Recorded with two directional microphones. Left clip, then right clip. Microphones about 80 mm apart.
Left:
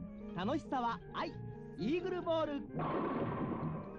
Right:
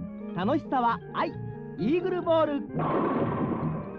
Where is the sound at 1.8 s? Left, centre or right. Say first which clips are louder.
Right 10 dB; left.